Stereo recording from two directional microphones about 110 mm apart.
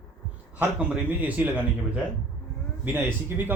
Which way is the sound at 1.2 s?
15° right (ahead or behind).